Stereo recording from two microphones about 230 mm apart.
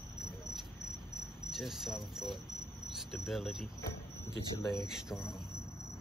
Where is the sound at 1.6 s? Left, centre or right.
Centre.